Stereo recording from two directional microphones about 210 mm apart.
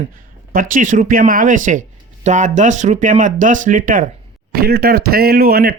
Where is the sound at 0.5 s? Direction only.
40° right (ahead or behind).